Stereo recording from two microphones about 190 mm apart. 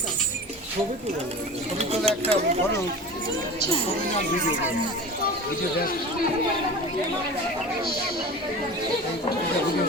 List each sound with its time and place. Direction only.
1.8 s speech: 35° right (ahead or behind)